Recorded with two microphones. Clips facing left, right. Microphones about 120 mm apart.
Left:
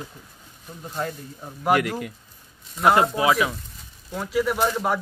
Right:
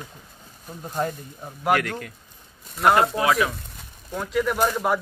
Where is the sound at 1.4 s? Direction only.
Centre (ahead or behind).